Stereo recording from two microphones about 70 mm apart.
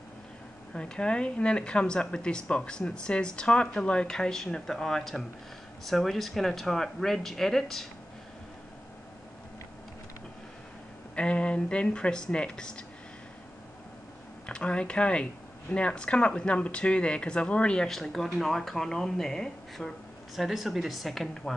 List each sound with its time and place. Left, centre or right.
0.7 s speech: centre
11.1 s speech: centre
14.4 s speech: centre